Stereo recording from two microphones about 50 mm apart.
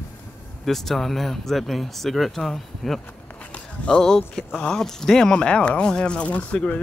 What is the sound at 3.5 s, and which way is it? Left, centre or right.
Walk, centre.